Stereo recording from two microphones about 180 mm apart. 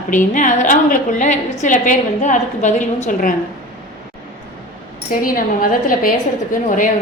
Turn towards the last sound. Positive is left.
turn(degrees=45)  # may be behind; listen again after turning